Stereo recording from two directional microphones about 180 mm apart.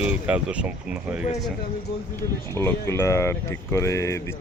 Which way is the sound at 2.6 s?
15° left (ahead or behind).